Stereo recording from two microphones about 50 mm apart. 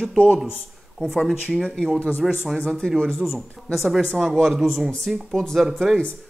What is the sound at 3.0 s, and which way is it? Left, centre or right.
Speech, centre.